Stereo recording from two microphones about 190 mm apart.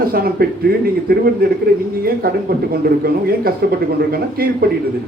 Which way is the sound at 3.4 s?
50° right (ahead or behind).